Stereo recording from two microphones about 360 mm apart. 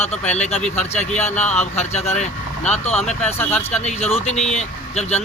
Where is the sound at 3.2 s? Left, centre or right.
Centre.